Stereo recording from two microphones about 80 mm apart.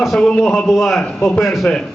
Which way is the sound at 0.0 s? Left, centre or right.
Centre.